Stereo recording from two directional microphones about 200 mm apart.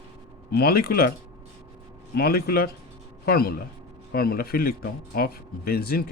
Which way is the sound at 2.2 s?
50° left (ahead or behind).